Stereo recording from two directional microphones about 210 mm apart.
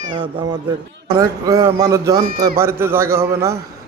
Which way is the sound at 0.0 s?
25° right (ahead or behind).